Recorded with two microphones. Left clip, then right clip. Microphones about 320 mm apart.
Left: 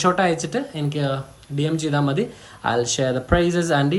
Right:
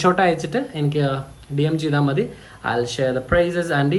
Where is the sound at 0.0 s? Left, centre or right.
Centre.